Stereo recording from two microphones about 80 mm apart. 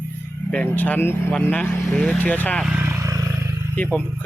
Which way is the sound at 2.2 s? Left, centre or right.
Left.